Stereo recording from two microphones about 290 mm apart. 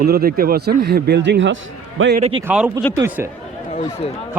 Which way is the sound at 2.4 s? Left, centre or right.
Centre.